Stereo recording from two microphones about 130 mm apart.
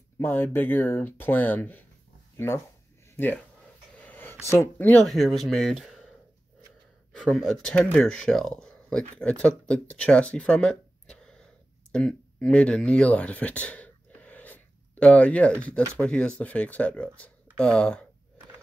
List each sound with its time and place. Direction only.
0.2 s speech: 15° left (ahead or behind)
4.0 s a sound: 15° left (ahead or behind)
4.5 s speech: 20° left (ahead or behind)
5.0 s speech: centre (ahead or behind)
7.1 s speech: 5° left (ahead or behind)